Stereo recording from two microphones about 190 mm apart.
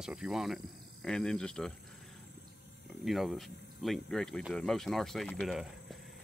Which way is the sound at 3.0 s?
Centre (ahead or behind).